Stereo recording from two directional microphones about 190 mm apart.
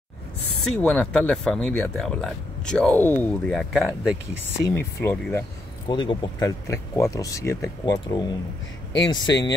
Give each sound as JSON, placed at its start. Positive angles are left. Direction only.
{"t": 0.7, "sound": "speech", "side_deg": 5}
{"t": 4.6, "sound": "speech", "side_deg": 10}
{"t": 5.9, "sound": "speech", "side_deg": 25}